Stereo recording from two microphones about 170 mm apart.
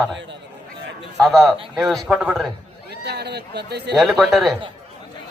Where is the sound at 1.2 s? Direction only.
Centre (ahead or behind).